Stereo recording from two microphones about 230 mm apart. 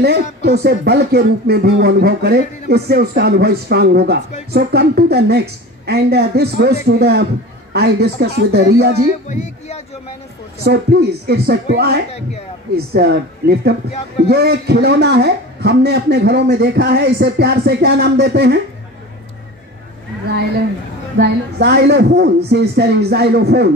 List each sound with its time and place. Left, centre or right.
0.0 s speech: right
9.3 s speech: left
10.6 s speech: right
21.2 s speech: right